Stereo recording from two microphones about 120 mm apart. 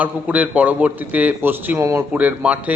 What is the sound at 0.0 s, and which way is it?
A man's voice, 10° right (ahead or behind).